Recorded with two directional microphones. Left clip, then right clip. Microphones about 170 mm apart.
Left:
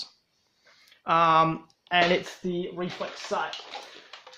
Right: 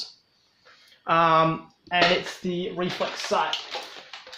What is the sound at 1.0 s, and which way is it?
Speech, 40° left (ahead or behind).